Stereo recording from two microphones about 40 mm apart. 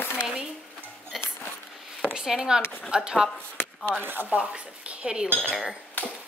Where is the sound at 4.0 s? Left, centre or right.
Right.